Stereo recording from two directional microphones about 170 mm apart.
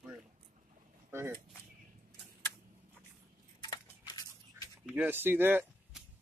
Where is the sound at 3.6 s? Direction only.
25° left (ahead or behind).